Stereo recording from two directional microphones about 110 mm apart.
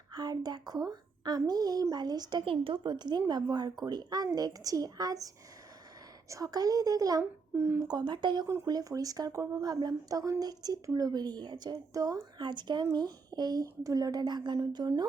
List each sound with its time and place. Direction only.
0.1 s a woman's voice: 40° right (ahead or behind)
2.4 s a woman's voice: 55° right (ahead or behind); by 7.3 s 35° right (ahead or behind)
7.5 s speech: 15° right (ahead or behind)
7.9 s a woman's voice: 40° right (ahead or behind)